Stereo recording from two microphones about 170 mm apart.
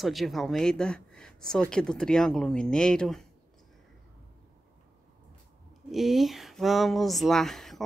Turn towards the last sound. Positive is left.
turn(degrees=0)  # may be behind; listen again after turning